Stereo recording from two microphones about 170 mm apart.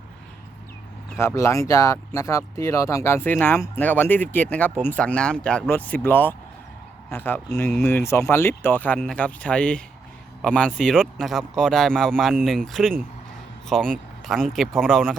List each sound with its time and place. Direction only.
1.2 s speech: 15° left (ahead or behind)